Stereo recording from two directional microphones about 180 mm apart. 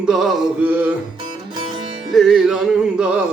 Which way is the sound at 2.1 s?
Centre (ahead or behind).